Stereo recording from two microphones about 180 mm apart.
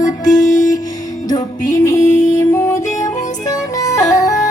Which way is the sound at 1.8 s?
15° left (ahead or behind).